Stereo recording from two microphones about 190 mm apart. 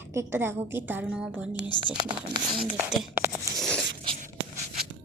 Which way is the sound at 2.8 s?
10° right (ahead or behind).